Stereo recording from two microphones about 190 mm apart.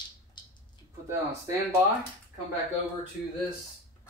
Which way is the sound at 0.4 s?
25° left (ahead or behind).